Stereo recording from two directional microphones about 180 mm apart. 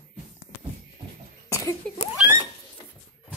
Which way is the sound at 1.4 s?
15° left (ahead or behind).